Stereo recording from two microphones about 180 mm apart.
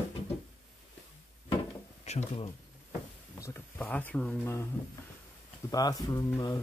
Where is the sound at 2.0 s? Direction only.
35° left (ahead or behind).